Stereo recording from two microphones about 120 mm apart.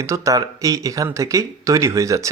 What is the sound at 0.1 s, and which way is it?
Speech, 25° right (ahead or behind).